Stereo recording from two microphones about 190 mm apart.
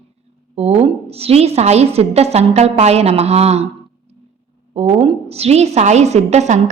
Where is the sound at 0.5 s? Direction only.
30° right (ahead or behind).